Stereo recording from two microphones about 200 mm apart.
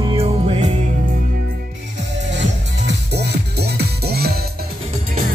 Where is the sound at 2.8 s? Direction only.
55° right (ahead or behind).